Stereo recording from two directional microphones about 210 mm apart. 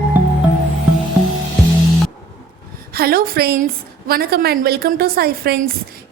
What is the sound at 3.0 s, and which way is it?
A woman's voice, 45° right (ahead or behind).